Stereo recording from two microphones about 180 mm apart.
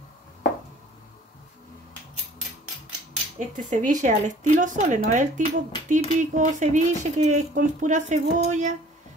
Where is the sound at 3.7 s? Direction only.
45° right (ahead or behind).